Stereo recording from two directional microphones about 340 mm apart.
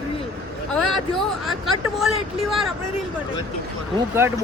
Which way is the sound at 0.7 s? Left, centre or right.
Centre.